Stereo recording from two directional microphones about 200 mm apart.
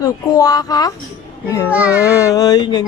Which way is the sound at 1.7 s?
5° right (ahead or behind).